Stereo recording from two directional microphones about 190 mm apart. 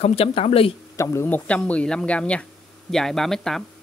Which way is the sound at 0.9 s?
15° left (ahead or behind).